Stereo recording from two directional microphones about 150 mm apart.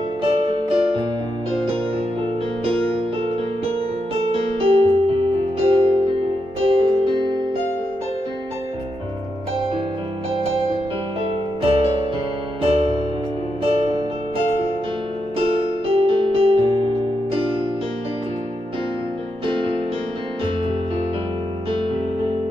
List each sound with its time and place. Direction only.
0.2 s music: 40° right (ahead or behind)
2.6 s music: 40° right (ahead or behind)
4.1 s music: 40° right (ahead or behind)
11.6 s music: 40° right (ahead or behind)
15.3 s music: 40° right (ahead or behind)
19.4 s music: 35° right (ahead or behind)
21.7 s music: 35° right (ahead or behind)